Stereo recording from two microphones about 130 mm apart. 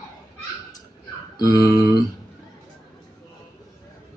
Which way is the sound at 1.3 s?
30° left (ahead or behind).